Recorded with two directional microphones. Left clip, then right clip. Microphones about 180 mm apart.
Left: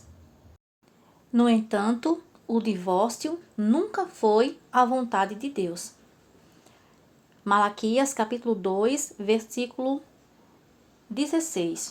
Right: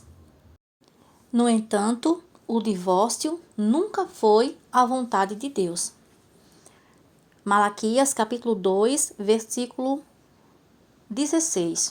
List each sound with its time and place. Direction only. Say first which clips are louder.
1.3 s speech: right 1 dB; 40° right (ahead or behind)
7.4 s speech: right 2 dB; 25° right (ahead or behind)
7.8 s speech: right 3 dB; 40° right (ahead or behind)
11.1 s speech: right 3 dB; 50° right (ahead or behind)